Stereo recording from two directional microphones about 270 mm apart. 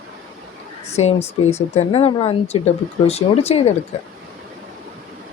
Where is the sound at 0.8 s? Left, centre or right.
Left.